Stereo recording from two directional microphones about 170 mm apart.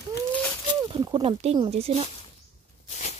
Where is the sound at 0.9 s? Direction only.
30° right (ahead or behind).